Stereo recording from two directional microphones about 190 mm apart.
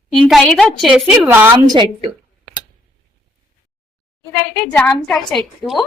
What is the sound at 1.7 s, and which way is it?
Speech, 25° right (ahead or behind).